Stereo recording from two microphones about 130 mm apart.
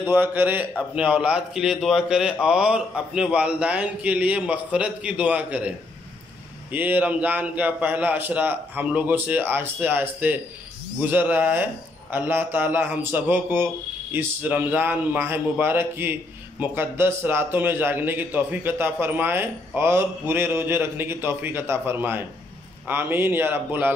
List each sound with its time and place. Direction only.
0.0 s a man's voice: 15° right (ahead or behind)